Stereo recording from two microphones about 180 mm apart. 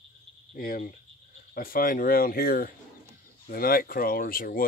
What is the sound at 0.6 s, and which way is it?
Speech, 50° left (ahead or behind).